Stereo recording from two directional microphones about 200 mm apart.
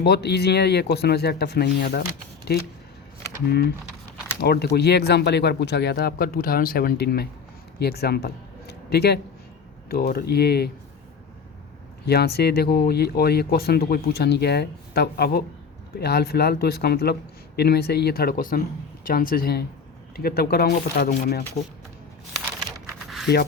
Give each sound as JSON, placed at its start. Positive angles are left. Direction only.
{"t": 0.0, "sound": "speech", "side_deg": 55}
{"t": 4.4, "sound": "speech", "side_deg": 50}
{"t": 12.0, "sound": "speech", "side_deg": 50}
{"t": 23.0, "sound": "a sound", "side_deg": 0}